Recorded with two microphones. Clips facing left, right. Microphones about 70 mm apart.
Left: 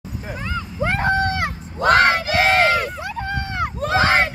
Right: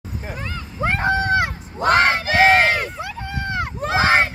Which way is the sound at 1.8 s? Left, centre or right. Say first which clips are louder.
Left 1 dB; right.